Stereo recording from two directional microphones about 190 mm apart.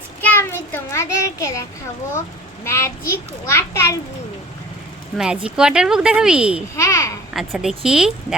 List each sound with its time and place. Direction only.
0.2 s a child's voice: 10° left (ahead or behind)
2.6 s a child's voice: 15° left (ahead or behind)
5.1 s speech: 5° right (ahead or behind)
6.7 s a child's voice: 15° left (ahead or behind)
7.3 s speech: centre (ahead or behind)